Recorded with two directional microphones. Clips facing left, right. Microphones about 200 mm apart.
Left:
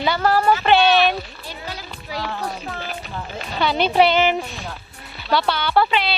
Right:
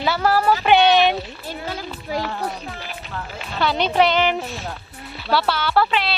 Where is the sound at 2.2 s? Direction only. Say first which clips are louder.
Right 1 dB; 5° right (ahead or behind).